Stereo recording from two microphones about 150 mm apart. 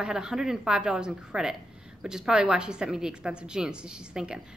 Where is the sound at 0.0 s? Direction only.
5° right (ahead or behind).